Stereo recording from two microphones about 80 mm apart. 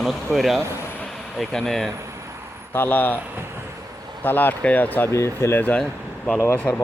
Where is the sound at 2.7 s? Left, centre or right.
Left.